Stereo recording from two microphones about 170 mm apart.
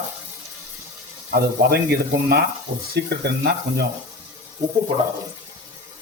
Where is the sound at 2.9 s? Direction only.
75° right (ahead or behind).